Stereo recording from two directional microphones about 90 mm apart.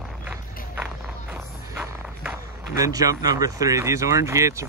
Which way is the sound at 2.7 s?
40° right (ahead or behind).